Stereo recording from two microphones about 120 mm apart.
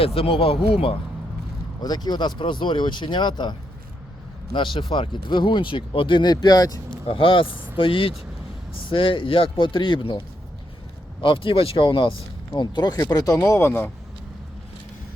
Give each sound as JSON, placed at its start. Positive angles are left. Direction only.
{"t": 0.0, "sound": "speech", "side_deg": 50}
{"t": 1.8, "sound": "speech", "side_deg": 35}
{"t": 4.5, "sound": "speech", "side_deg": 45}
{"t": 7.1, "sound": "speech", "side_deg": 45}
{"t": 11.2, "sound": "speech", "side_deg": 45}
{"t": 13.4, "sound": "speech", "side_deg": 20}